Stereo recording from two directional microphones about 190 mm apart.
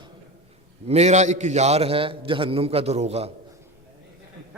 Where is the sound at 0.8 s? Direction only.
35° right (ahead or behind).